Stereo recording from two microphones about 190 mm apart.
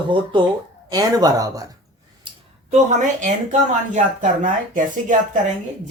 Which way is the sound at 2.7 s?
40° right (ahead or behind).